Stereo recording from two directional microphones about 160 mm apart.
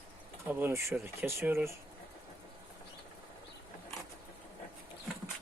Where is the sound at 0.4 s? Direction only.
15° right (ahead or behind).